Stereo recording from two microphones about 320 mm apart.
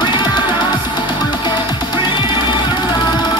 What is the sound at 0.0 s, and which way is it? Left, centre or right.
Music, centre.